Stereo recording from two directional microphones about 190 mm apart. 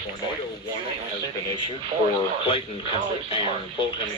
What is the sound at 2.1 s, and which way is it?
Speech, 30° left (ahead or behind).